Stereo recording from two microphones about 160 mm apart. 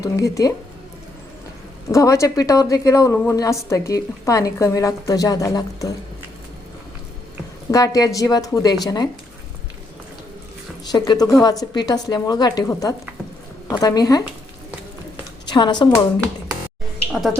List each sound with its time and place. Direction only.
0.0 s a woman's voice: 20° left (ahead or behind)
1.9 s a woman's voice: 20° left (ahead or behind)
7.7 s a woman's voice: 20° left (ahead or behind)
10.9 s a woman's voice: 25° left (ahead or behind)
15.4 s a woman's voice: 30° left (ahead or behind)
17.1 s speech: centre (ahead or behind)